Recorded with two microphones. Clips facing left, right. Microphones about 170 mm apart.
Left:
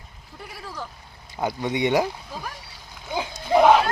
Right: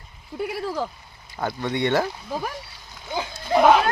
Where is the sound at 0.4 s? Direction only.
70° right (ahead or behind).